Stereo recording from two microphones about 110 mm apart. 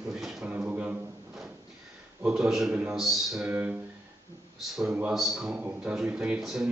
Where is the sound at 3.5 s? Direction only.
15° right (ahead or behind).